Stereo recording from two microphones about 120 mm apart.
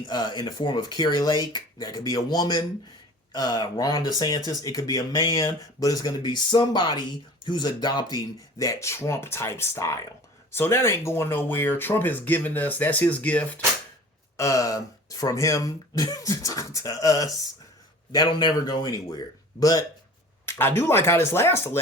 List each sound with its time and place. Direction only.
0.1 s speech: 35° left (ahead or behind); by 13.6 s 10° left (ahead or behind)
14.3 s speech: 25° left (ahead or behind)
20.4 s speech: 20° left (ahead or behind)